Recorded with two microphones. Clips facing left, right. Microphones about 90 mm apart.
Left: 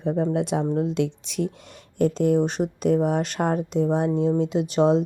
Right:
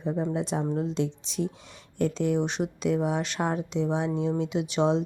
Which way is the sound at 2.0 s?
50° left (ahead or behind).